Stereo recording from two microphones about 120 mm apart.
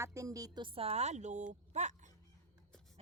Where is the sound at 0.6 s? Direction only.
55° right (ahead or behind); by 1.9 s 85° right.